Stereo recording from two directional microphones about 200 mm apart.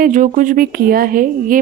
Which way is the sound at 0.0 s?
40° right (ahead or behind).